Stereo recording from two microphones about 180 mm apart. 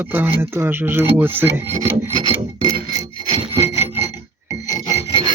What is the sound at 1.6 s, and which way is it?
Rub, 35° right (ahead or behind).